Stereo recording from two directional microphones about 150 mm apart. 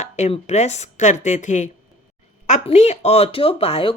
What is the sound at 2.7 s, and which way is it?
Speech, 45° left (ahead or behind).